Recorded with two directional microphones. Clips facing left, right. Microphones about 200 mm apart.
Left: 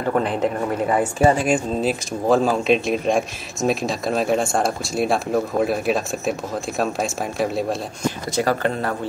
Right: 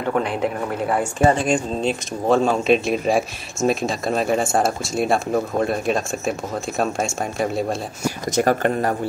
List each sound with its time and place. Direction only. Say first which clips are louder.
0.0 s speech: left 1 dB; centre (ahead or behind)
8.4 s speech: right 3 dB; 50° right (ahead or behind)